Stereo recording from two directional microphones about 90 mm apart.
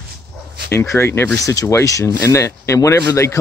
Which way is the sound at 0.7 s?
30° left (ahead or behind).